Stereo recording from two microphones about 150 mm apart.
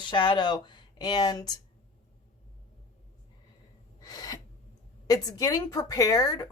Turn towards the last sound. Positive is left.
turn(degrees=25)  # may be behind; listen again after turning